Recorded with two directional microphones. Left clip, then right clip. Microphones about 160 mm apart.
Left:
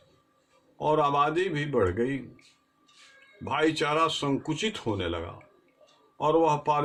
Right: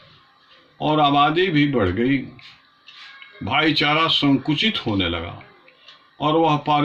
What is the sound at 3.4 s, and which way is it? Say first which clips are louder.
Speech: right 7 dB; 35° left (ahead or behind).